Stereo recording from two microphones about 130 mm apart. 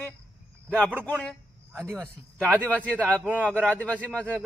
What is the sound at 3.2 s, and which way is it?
Speech, 10° right (ahead or behind).